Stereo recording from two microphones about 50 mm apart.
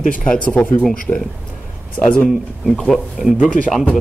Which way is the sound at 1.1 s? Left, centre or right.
Left.